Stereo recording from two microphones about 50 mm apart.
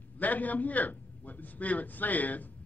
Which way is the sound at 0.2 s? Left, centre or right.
Left.